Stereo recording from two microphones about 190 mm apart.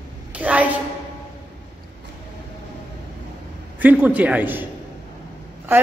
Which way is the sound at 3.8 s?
10° right (ahead or behind).